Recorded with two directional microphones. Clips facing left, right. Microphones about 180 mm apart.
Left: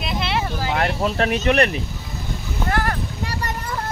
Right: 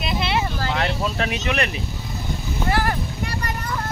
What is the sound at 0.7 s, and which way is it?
Speech, 50° left (ahead or behind).